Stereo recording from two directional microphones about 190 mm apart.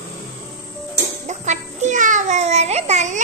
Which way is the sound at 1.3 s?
40° right (ahead or behind).